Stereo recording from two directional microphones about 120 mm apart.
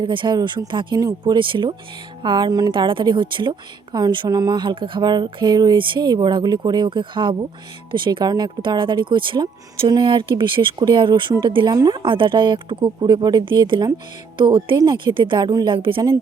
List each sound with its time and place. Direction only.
0.0 s speech: 40° right (ahead or behind)
2.7 s speech: 45° right (ahead or behind)